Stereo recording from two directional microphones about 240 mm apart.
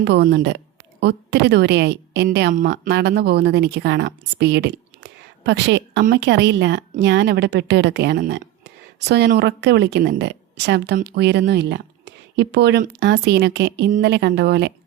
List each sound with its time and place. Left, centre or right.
0.0 s a woman's voice: right